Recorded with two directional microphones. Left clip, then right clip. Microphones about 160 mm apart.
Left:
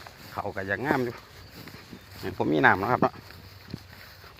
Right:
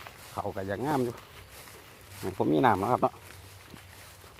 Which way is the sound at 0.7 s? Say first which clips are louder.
Left 3 dB; 10° right (ahead or behind).